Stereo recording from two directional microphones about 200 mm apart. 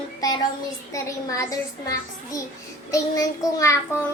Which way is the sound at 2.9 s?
15° left (ahead or behind).